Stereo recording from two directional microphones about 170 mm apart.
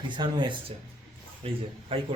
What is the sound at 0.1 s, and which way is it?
Speech, 25° right (ahead or behind).